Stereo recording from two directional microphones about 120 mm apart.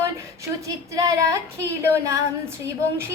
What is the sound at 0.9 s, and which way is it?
Child singing, 30° right (ahead or behind).